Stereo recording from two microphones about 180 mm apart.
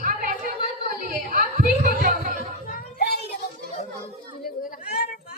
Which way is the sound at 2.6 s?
60° left (ahead or behind).